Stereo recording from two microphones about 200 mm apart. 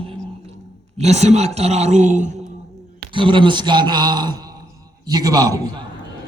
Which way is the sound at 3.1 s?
25° right (ahead or behind).